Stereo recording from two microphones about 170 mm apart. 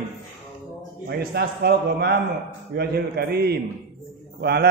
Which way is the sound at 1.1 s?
70° right (ahead or behind).